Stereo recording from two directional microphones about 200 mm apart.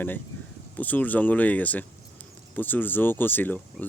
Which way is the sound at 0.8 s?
10° left (ahead or behind).